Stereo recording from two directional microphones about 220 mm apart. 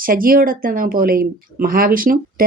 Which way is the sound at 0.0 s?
40° right (ahead or behind).